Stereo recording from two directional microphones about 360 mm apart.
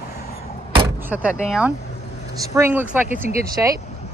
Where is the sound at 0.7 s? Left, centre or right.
Centre.